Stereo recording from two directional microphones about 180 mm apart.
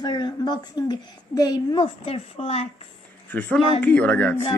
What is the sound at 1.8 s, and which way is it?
Speech, 35° left (ahead or behind).